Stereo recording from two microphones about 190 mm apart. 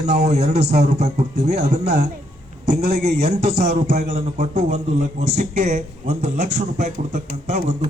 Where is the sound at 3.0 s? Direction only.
60° right (ahead or behind).